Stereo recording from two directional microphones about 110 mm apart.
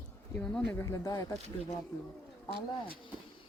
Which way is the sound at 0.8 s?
30° left (ahead or behind).